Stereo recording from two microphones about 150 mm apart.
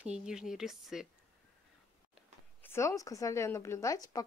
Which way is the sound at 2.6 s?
20° left (ahead or behind).